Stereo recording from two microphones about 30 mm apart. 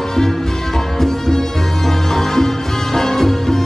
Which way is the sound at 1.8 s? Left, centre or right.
Centre.